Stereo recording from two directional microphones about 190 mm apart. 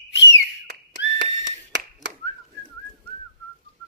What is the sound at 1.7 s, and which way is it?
Whistling, 70° right (ahead or behind).